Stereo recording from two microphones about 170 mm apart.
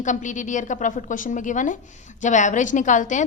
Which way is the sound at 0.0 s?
45° left (ahead or behind).